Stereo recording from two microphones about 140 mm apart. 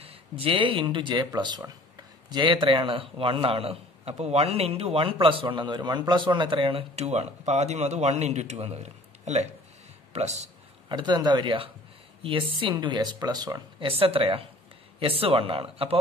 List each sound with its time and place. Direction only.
0.0 s a man's voice: 40° right (ahead or behind)
10.9 s a man's voice: 30° right (ahead or behind)
13.8 s a man's voice: 40° right (ahead or behind)